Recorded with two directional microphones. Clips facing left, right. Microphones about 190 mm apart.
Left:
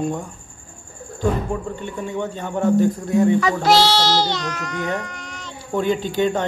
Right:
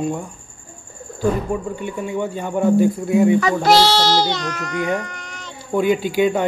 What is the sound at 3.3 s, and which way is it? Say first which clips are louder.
A child's voice: right 2 dB; 50° right (ahead or behind).